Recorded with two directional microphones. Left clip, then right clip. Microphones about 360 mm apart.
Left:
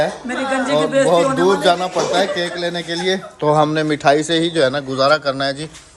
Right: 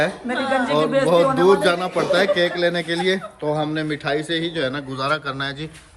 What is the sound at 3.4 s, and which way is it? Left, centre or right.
A man's voice, left.